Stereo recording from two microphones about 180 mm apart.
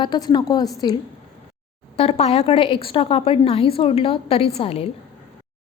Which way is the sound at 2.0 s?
35° left (ahead or behind).